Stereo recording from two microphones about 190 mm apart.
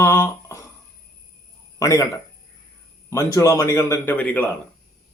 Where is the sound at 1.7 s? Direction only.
15° left (ahead or behind).